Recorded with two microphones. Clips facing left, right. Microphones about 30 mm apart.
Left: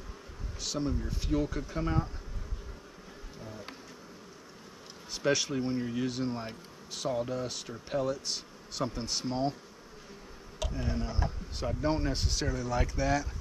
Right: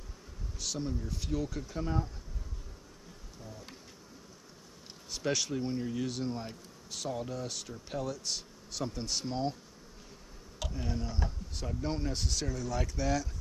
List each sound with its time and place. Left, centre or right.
0.6 s speech: centre
3.4 s insect: left
5.1 s speech: centre
10.7 s speech: centre